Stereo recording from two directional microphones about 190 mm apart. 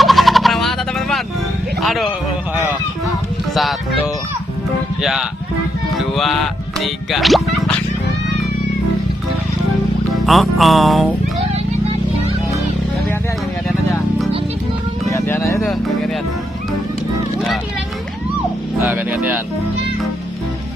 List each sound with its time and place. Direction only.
0.0 s a sound: centre (ahead or behind)
1.8 s speech: centre (ahead or behind)
3.5 s music: centre (ahead or behind)
6.1 s speech: centre (ahead or behind)
10.2 s music: centre (ahead or behind)
15.1 s speech: 15° left (ahead or behind)
15.6 s music: centre (ahead or behind)
18.9 s speech: 10° right (ahead or behind)